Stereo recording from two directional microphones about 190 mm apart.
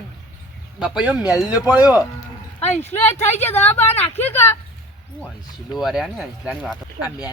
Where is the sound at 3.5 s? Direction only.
10° left (ahead or behind).